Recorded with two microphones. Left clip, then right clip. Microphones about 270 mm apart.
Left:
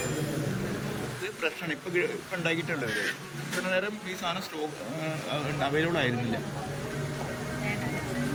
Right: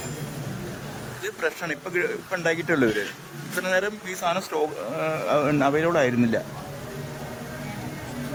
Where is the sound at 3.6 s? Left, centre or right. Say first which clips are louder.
Right 6 dB; right.